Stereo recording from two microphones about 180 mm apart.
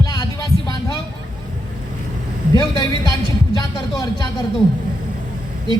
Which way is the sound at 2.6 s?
25° left (ahead or behind).